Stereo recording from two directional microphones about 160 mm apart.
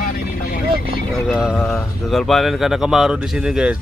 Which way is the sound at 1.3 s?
Centre (ahead or behind).